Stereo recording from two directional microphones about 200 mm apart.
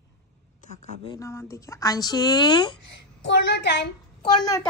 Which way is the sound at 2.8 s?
60° left (ahead or behind).